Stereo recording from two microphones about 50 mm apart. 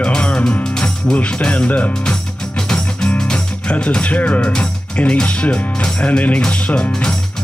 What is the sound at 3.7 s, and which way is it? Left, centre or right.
Speech, left.